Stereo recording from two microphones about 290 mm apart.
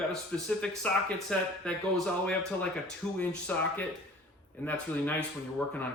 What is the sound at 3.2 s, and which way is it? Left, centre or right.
Speech, centre.